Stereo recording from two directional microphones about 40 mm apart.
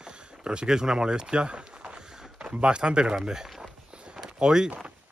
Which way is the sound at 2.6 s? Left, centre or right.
Right.